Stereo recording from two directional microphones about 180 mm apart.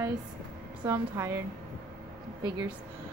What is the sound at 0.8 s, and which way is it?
Speech, 15° right (ahead or behind).